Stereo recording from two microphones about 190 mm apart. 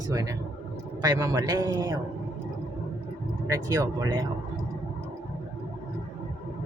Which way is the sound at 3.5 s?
20° right (ahead or behind).